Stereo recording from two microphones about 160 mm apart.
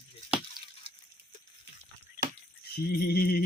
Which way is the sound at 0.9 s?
65° right (ahead or behind).